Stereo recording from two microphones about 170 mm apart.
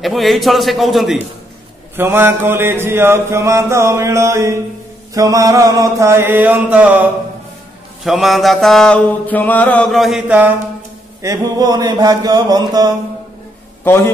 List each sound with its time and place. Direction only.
0.0 s mantra: centre (ahead or behind)
2.0 s mantra: 15° right (ahead or behind)
11.2 s mantra: 20° right (ahead or behind)
13.8 s a man's voice: 15° left (ahead or behind)